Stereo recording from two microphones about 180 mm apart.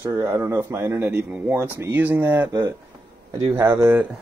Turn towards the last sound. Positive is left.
turn(degrees=-15)  # may be behind; listen again after turning